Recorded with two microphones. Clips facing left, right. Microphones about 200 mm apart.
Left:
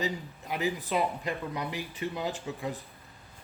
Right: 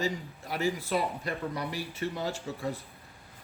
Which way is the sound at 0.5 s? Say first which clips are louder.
Even; 15° left (ahead or behind).